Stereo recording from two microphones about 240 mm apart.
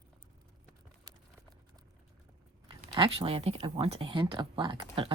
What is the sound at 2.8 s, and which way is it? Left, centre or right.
Speech, right.